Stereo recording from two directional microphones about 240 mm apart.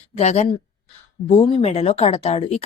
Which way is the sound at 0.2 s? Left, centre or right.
Left.